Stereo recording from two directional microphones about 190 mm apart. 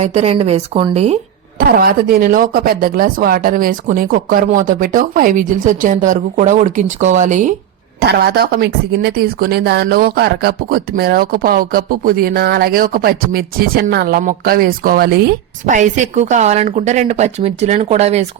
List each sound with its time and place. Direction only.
0.0 s a woman's voice: 35° right (ahead or behind)
1.5 s a woman's voice: 50° right (ahead or behind)
8.0 s a woman's voice: 55° right (ahead or behind)
15.6 s a woman's voice: 40° right (ahead or behind)